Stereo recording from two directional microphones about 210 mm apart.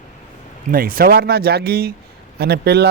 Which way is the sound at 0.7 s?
45° right (ahead or behind).